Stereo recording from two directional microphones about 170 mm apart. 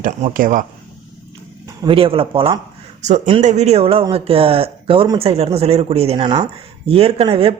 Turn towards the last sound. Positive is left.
turn(degrees=-35)  # may be behind; listen again after turning